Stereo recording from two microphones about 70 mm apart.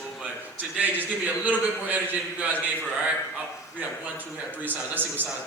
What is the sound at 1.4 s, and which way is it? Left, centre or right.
A man's voice, right.